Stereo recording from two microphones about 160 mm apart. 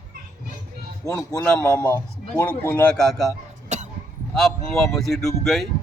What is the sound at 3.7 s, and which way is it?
Cough, 45° right (ahead or behind).